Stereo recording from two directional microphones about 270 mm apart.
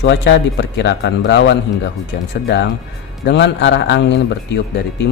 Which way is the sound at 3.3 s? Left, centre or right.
Left.